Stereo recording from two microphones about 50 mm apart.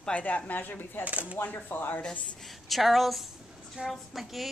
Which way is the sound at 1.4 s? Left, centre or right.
Left.